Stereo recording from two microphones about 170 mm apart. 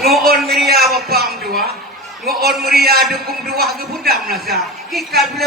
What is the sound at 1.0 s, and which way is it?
Speech, 65° right (ahead or behind).